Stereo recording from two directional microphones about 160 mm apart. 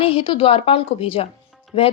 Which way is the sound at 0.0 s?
35° left (ahead or behind).